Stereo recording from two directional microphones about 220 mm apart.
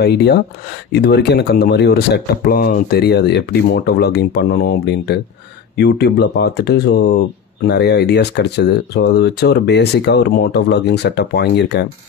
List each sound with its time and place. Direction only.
0.0 s speech: 50° left (ahead or behind)